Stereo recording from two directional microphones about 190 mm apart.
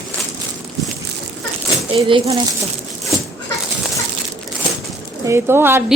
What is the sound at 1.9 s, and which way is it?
Speech, 30° right (ahead or behind).